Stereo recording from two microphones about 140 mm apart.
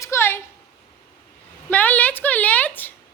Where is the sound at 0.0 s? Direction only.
20° left (ahead or behind).